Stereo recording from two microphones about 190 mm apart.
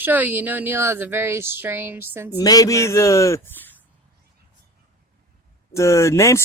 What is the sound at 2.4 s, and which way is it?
Speech, 20° left (ahead or behind).